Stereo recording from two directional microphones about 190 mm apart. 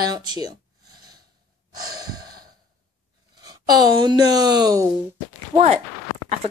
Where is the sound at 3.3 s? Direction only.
20° right (ahead or behind).